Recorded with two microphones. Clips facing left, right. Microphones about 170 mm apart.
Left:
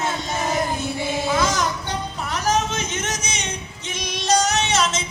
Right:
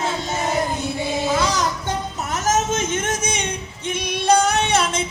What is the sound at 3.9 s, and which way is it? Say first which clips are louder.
Female singing: right 4 dB; 55° right (ahead or behind).